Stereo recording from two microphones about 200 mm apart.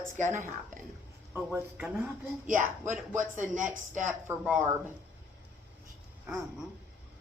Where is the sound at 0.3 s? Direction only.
10° right (ahead or behind).